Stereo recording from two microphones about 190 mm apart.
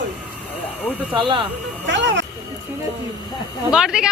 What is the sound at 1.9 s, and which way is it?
Speech, 70° right (ahead or behind).